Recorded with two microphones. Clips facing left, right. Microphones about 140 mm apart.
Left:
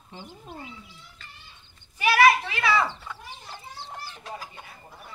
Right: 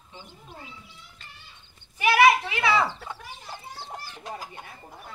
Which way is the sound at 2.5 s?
20° right (ahead or behind).